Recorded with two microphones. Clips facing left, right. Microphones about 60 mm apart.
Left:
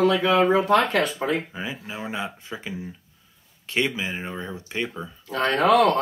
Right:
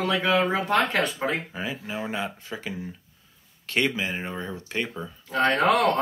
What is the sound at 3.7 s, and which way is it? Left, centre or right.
Speech, centre.